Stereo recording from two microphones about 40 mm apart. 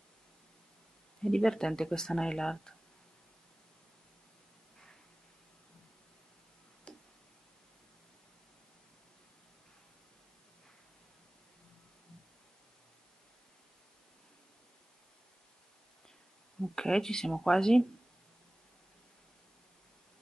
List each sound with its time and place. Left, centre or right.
1.2 s speech: centre
6.9 s tick: left
16.7 s speech: centre